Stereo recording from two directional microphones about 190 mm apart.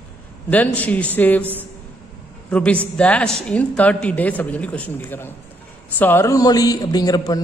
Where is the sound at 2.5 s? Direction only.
5° left (ahead or behind).